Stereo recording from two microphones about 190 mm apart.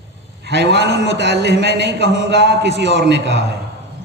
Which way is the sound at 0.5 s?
65° right (ahead or behind).